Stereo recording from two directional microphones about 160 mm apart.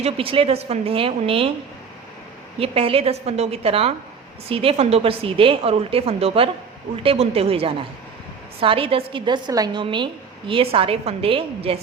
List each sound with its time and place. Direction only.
0.0 s a woman's voice: 35° right (ahead or behind)
2.6 s a woman's voice: 35° right (ahead or behind)